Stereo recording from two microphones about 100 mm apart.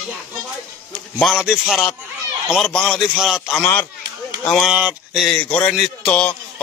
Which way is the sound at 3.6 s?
20° left (ahead or behind).